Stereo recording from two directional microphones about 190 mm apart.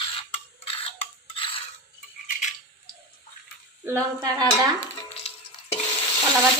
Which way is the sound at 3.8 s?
15° right (ahead or behind).